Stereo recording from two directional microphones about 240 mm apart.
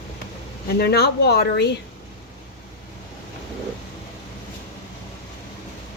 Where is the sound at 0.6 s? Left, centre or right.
Left.